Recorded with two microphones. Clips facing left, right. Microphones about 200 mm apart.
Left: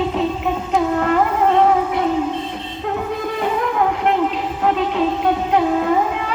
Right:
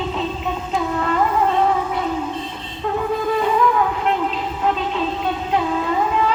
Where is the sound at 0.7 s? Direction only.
60° left (ahead or behind).